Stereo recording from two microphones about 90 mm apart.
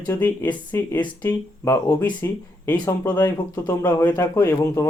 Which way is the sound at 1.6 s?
30° left (ahead or behind).